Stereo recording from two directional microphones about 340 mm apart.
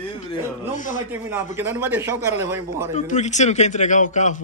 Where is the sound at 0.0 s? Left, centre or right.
Centre.